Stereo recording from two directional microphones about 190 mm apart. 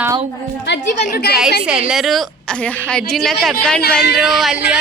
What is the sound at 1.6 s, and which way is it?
A woman's voice, 5° right (ahead or behind).